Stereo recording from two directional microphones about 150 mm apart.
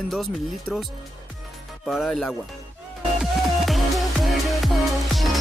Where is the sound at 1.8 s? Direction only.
Centre (ahead or behind).